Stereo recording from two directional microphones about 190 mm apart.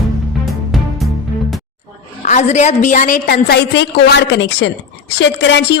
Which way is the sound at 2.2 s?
40° left (ahead or behind).